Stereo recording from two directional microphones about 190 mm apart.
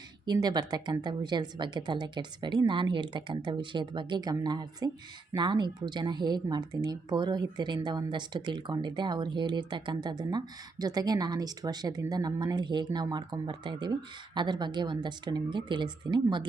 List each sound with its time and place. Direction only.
0.3 s speech: 20° right (ahead or behind)